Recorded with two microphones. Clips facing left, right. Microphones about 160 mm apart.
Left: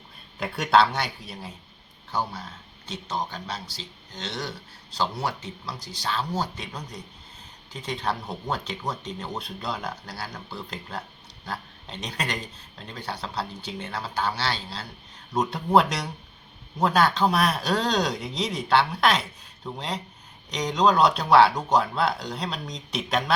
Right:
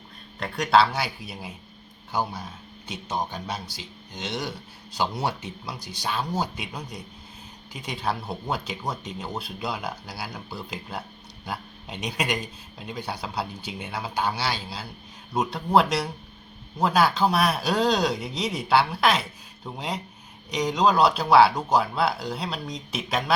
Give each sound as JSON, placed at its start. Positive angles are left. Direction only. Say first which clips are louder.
{"t": 0.3, "sound": "speech", "louder": "even", "side_deg": 5}
{"t": 2.8, "sound": "speech", "louder": "right 1 dB", "side_deg": -15}